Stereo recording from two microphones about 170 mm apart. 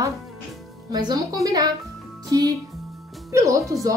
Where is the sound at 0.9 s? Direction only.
25° right (ahead or behind).